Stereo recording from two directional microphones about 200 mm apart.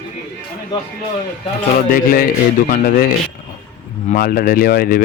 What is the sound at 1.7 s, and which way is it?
Speech, 45° left (ahead or behind).